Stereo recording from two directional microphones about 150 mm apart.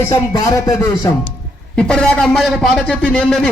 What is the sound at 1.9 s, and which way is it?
A man's voice, 5° left (ahead or behind).